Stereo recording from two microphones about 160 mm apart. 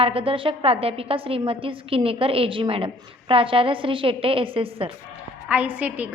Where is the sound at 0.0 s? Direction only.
35° right (ahead or behind).